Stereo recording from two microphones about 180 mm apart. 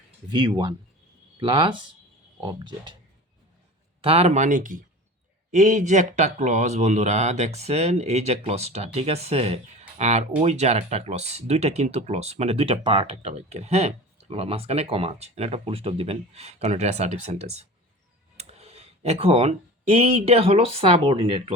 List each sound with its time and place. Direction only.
0.3 s speech: 25° right (ahead or behind)
4.0 s speech: 35° right (ahead or behind)